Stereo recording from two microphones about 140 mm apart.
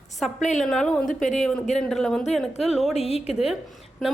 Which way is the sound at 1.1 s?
65° left (ahead or behind).